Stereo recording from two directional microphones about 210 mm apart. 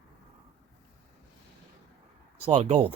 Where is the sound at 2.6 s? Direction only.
35° right (ahead or behind).